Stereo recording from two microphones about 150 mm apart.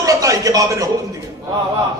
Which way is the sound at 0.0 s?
25° right (ahead or behind).